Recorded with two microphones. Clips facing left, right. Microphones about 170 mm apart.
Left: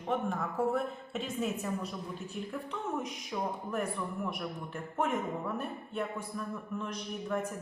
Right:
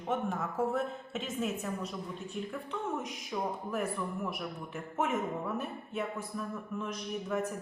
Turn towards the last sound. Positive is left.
turn(degrees=-5)  # may be behind; listen again after turning